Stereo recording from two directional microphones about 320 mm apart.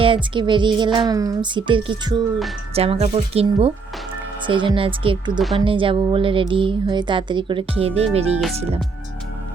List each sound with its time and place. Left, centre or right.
0.0 s speech: centre